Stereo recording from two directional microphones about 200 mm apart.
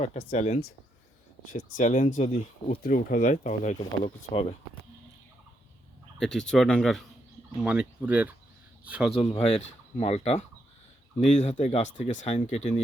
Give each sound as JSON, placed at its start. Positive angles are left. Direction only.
{"t": 0.0, "sound": "speech", "side_deg": 35}
{"t": 6.1, "sound": "speech", "side_deg": 5}
{"t": 9.1, "sound": "speech", "side_deg": 30}